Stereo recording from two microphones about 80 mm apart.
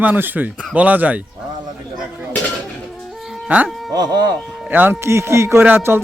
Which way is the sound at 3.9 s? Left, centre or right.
Right.